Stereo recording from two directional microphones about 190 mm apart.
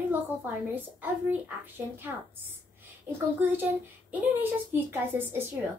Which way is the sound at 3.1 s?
10° right (ahead or behind).